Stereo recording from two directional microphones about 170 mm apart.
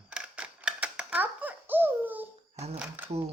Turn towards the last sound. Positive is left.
turn(degrees=-10)  # may be behind; listen again after turning